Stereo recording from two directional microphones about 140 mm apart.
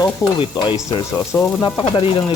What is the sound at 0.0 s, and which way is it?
Speech, 30° left (ahead or behind).